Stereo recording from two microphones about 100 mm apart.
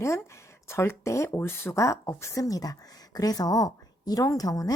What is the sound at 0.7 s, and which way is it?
Speech, 25° left (ahead or behind).